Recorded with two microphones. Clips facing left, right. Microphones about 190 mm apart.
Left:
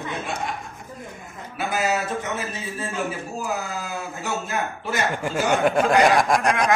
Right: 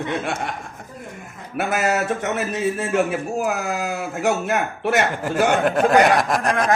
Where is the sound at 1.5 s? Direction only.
65° right (ahead or behind).